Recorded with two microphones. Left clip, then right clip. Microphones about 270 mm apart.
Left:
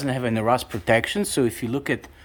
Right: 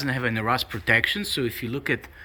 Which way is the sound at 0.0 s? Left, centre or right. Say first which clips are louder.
Left 2 dB; centre.